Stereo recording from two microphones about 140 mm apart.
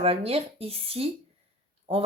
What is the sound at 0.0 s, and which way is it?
Speech, 45° right (ahead or behind).